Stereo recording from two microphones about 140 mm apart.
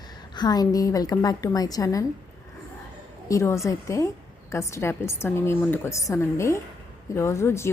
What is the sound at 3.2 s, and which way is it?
A woman's voice, 20° left (ahead or behind).